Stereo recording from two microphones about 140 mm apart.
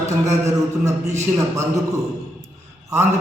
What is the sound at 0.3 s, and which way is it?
Speech, 20° right (ahead or behind).